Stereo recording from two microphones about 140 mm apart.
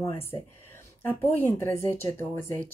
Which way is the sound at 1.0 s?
15° left (ahead or behind).